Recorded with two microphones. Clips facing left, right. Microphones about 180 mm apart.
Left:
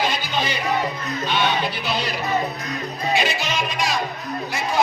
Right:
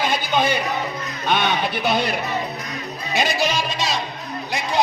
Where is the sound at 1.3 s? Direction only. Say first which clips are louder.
Right 2 dB; 55° right (ahead or behind).